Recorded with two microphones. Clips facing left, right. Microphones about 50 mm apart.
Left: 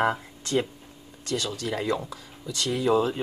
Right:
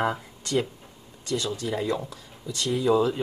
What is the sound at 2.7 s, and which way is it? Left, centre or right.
Speech, left.